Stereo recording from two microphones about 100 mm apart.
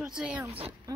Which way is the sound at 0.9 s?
35° right (ahead or behind).